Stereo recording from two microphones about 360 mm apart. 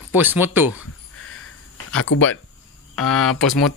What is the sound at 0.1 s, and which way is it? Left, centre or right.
Speech, centre.